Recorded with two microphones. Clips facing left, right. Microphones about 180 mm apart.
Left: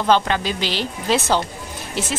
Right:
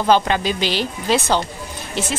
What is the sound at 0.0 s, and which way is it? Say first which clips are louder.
Speech: right 2 dB; 15° right (ahead or behind).